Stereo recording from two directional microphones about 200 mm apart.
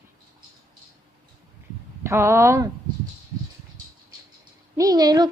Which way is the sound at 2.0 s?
15° right (ahead or behind).